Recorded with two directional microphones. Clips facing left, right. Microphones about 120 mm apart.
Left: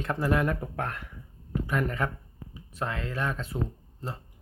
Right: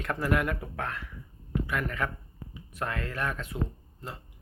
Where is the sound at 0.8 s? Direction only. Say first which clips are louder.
Left 2 dB; 45° left (ahead or behind).